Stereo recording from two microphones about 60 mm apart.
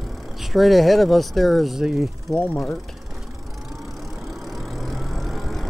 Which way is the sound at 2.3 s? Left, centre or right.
Left.